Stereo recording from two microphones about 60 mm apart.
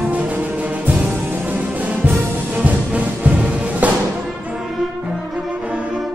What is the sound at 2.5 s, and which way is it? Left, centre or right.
Music, right.